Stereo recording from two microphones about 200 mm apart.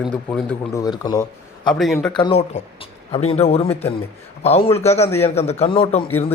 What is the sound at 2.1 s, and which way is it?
A man's voice, 25° left (ahead or behind).